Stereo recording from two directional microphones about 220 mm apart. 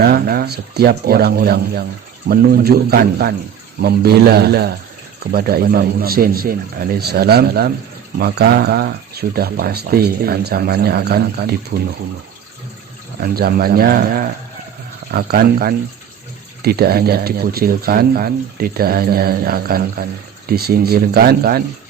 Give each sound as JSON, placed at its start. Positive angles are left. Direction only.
{"t": 0.0, "sound": "speech", "side_deg": -45}
{"t": 13.2, "sound": "speech", "side_deg": -45}
{"t": 15.1, "sound": "speech", "side_deg": -45}